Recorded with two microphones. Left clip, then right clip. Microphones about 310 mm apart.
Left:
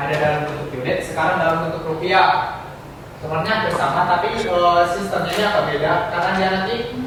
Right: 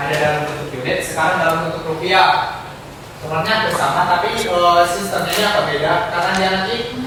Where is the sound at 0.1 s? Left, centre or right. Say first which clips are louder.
Right 2 dB; centre.